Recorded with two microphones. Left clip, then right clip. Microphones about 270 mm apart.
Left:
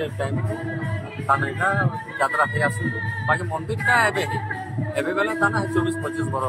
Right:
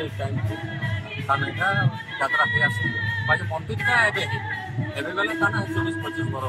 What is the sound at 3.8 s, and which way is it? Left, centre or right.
Speech, centre.